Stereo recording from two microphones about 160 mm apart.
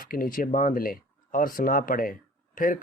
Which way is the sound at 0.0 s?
60° left (ahead or behind).